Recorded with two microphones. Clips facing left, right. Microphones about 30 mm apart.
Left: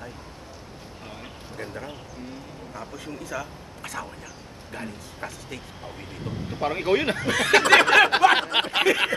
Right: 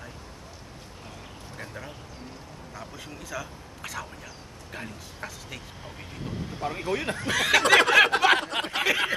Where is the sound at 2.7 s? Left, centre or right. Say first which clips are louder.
Left 4 dB; centre.